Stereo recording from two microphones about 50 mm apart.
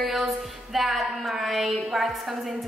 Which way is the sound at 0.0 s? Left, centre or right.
Centre.